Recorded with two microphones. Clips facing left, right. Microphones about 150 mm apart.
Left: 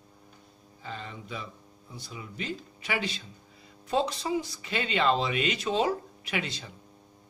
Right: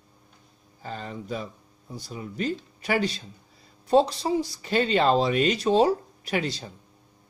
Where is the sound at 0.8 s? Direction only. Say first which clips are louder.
Right 5 dB; 40° right (ahead or behind).